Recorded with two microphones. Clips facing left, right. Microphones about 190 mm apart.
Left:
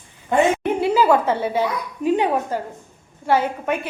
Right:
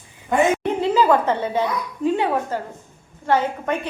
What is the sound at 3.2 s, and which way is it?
Speech, 10° left (ahead or behind).